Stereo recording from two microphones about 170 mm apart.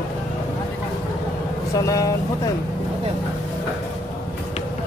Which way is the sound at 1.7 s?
20° left (ahead or behind).